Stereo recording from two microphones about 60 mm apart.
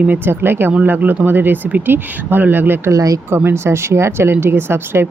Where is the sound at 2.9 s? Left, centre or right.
Right.